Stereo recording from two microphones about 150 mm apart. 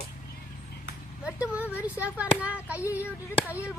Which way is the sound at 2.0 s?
10° right (ahead or behind).